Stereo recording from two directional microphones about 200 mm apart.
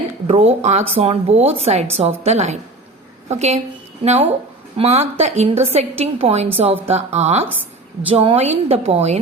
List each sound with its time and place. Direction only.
0.3 s a woman's voice: 30° right (ahead or behind)